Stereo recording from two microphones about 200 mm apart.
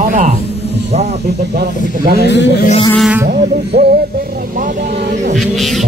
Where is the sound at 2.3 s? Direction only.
60° left (ahead or behind).